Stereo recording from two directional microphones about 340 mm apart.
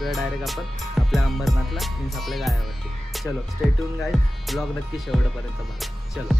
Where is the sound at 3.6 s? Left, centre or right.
Centre.